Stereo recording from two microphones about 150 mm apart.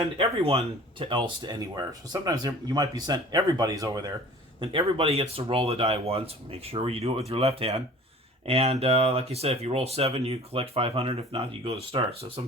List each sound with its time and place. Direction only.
0.2 s speech: 40° right (ahead or behind)